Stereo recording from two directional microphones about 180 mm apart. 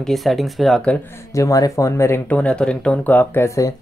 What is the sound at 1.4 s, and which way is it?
Speech, 20° left (ahead or behind).